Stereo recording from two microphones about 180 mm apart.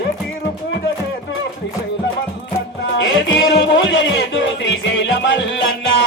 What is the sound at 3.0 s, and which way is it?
Music, 90° left.